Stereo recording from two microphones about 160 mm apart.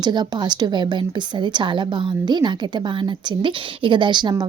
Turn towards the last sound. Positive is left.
turn(degrees=-30)  # may be behind; listen again after turning